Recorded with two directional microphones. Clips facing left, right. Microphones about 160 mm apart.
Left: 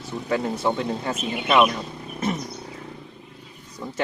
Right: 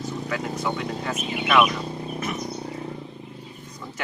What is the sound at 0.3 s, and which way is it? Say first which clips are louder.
Speech: left 6 dB; 30° left (ahead or behind).